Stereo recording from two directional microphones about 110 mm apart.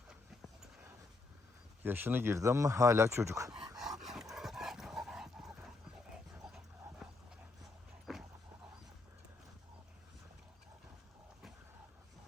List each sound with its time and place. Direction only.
0.1 s a sound: 5° right (ahead or behind)
1.8 s speech: 20° right (ahead or behind)
3.8 s dog: 5° right (ahead or behind)
6.4 s clip-clop: 5° right (ahead or behind)
7.0 s dog: centre (ahead or behind)